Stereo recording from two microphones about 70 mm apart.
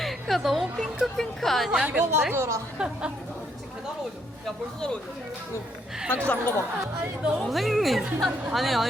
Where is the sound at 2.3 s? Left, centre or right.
Right.